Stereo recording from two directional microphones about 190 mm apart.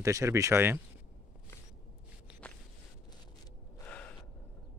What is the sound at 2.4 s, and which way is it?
Walk, 5° left (ahead or behind).